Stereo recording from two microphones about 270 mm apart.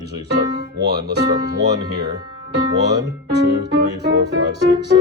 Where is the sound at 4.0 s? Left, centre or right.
Right.